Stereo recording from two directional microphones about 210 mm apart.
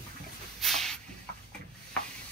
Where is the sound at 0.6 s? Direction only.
Centre (ahead or behind).